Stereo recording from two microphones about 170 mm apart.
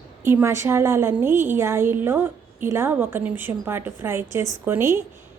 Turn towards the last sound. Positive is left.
turn(degrees=-15)  # may be behind; listen again after turning